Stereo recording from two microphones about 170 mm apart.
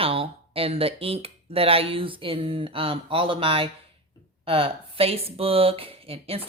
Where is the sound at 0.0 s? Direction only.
35° right (ahead or behind).